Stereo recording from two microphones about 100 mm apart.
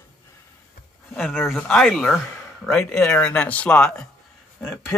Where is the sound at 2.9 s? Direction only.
10° left (ahead or behind).